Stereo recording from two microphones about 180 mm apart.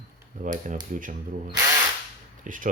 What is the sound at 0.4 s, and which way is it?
Speech, 45° right (ahead or behind).